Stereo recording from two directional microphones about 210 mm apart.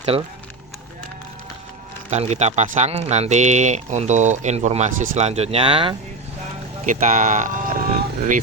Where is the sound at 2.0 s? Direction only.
30° right (ahead or behind).